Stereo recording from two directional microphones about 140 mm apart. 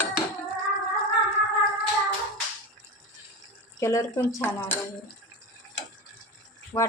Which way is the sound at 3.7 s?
20° left (ahead or behind).